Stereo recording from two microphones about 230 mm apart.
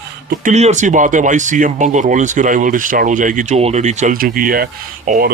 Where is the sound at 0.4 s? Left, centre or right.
Right.